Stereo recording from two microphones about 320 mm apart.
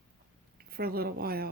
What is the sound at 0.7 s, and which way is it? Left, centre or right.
Speech, right.